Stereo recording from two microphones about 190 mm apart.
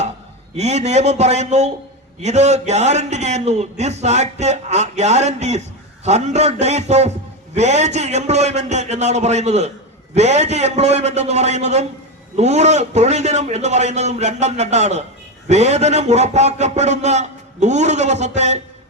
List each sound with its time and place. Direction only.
0.5 s a man's voice: 35° right (ahead or behind)